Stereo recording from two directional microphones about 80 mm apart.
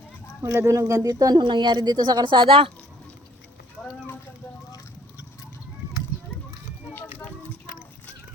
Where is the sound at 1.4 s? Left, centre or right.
Right.